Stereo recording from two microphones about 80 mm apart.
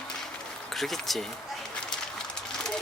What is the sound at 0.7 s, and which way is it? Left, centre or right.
Speech, centre.